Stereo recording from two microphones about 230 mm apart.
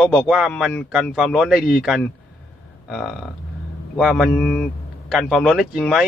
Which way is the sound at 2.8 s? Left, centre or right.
Centre.